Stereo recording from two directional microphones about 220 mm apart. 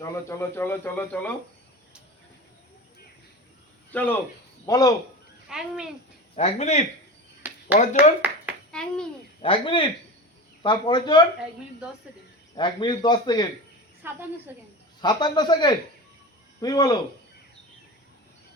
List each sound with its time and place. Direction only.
0.0 s speech: 10° left (ahead or behind)
3.9 s speech: 10° left (ahead or behind)
5.5 s speech: 5° right (ahead or behind)
6.3 s a man's voice: 30° left (ahead or behind)
7.4 s a sound: 5° right (ahead or behind)
9.4 s a man's voice: 25° left (ahead or behind)
12.5 s a man's voice: 20° left (ahead or behind)
14.0 s a woman's voice: 10° right (ahead or behind)
15.0 s a man's voice: 20° left (ahead or behind)